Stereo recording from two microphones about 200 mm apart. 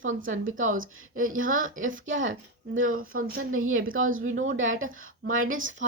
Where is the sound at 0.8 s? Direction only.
90° right.